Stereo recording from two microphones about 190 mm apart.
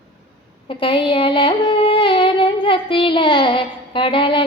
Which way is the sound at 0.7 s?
30° left (ahead or behind).